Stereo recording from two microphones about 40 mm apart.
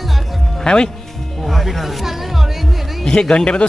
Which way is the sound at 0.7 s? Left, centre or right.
Centre.